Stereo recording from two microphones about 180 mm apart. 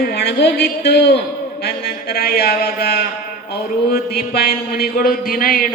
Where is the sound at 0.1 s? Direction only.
70° left (ahead or behind).